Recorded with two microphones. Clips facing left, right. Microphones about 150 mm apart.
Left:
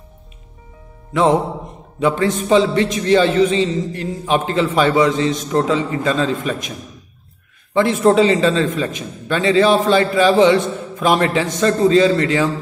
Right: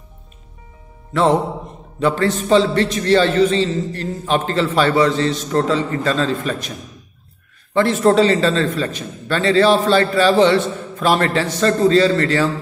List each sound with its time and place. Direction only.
1.1 s a man's voice: 15° left (ahead or behind)
8.0 s a man's voice: 10° left (ahead or behind)